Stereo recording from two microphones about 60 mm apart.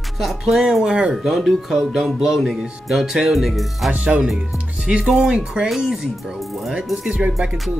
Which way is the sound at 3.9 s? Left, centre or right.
Right.